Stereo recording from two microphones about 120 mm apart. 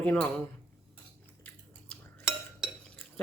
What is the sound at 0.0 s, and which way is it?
Speech, 10° left (ahead or behind).